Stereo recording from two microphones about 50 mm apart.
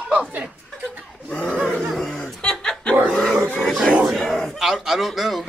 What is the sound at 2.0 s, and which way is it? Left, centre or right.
Laughter, centre.